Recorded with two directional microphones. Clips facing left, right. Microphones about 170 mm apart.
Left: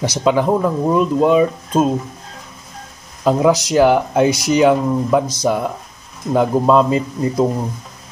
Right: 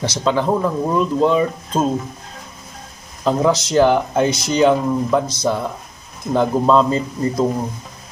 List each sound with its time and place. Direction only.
0.0 s speech: 15° left (ahead or behind)
3.3 s speech: 10° left (ahead or behind)